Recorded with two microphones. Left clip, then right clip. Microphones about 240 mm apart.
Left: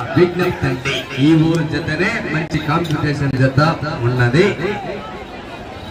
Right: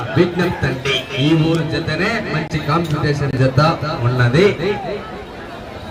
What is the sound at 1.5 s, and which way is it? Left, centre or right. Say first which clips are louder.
A man's voice: even; right.